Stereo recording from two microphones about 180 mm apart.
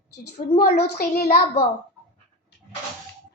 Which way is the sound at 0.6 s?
65° left (ahead or behind).